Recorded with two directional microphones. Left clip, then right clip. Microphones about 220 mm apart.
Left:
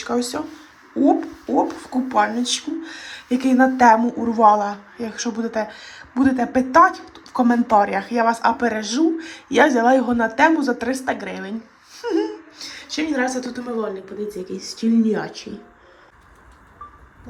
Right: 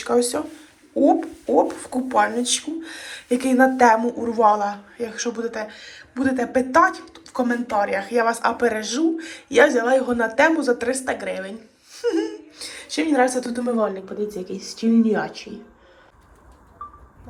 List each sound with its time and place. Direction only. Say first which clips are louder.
0.0 s a woman's voice: right 3 dB; 15° left (ahead or behind)
14.5 s speech: left 2 dB; centre (ahead or behind)
14.9 s speech: right 1 dB; 15° left (ahead or behind)